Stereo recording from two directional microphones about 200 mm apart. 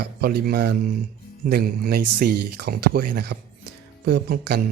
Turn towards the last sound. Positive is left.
turn(degrees=-50)  # may be behind; listen again after turning